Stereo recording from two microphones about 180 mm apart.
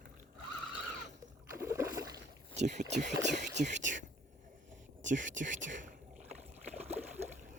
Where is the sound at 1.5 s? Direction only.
15° right (ahead or behind).